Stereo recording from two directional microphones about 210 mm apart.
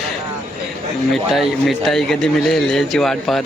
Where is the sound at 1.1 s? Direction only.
Centre (ahead or behind).